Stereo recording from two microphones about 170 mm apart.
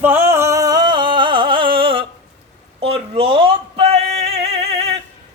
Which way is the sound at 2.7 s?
35° right (ahead or behind).